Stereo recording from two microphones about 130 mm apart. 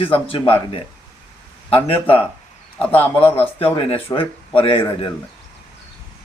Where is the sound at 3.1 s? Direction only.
45° left (ahead or behind).